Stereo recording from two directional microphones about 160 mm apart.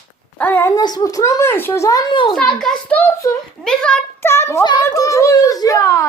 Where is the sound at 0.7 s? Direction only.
25° left (ahead or behind).